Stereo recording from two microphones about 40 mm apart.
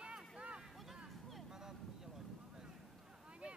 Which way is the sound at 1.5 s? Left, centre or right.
Centre.